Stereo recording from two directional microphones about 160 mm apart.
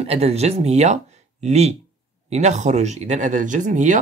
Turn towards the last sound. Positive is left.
turn(degrees=-50)  # may be behind; listen again after turning